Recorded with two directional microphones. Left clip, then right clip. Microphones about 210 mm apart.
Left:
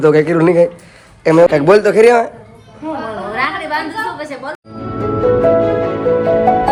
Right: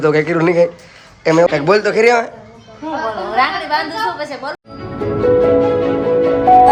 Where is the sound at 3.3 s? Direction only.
20° right (ahead or behind).